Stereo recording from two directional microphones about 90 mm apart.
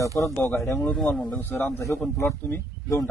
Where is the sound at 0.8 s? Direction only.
10° left (ahead or behind).